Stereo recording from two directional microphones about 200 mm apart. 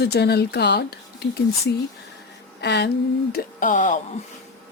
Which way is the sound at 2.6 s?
60° left (ahead or behind).